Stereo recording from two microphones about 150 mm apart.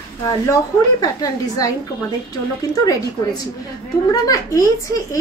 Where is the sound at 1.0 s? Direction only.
25° left (ahead or behind).